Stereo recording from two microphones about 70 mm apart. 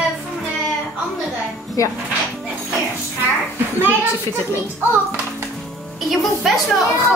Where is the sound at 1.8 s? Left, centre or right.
Left.